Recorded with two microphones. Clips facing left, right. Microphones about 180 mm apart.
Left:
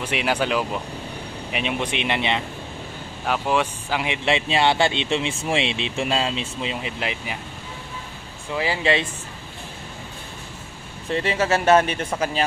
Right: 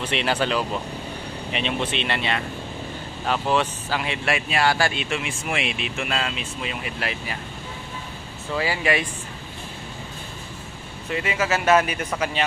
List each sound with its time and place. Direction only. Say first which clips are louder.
0.0 s speech: even; 10° left (ahead or behind)
8.5 s speech: left 1 dB; 25° left (ahead or behind)
11.1 s speech: left 3 dB; 30° left (ahead or behind)